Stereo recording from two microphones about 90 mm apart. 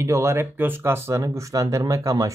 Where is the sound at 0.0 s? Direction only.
30° right (ahead or behind).